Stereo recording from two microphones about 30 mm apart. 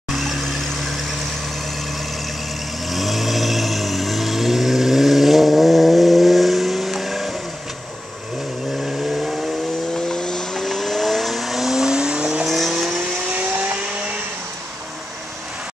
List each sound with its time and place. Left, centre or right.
0.4 s vehicle: centre
0.9 s vehicle: centre
2.9 s vehicle: centre
8.8 s vehicle: centre
9.9 s vehicle: left
10.5 s vehicle: centre
11.8 s vehicle: right
12.4 s vehicle: centre